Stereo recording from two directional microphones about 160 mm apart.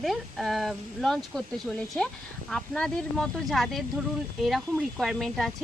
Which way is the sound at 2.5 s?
5° left (ahead or behind).